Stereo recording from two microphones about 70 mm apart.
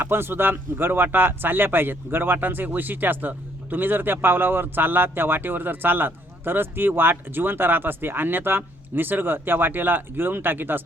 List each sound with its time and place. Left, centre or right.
0.0 s speech: right